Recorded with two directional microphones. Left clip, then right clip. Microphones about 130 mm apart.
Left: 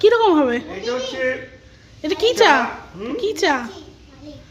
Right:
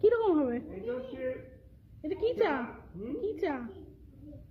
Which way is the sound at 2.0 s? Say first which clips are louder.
Left 14 dB; 15° left (ahead or behind).